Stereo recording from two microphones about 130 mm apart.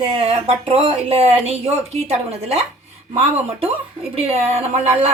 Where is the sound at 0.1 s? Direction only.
50° right (ahead or behind).